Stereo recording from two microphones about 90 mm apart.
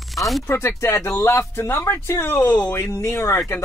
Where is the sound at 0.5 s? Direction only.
30° left (ahead or behind).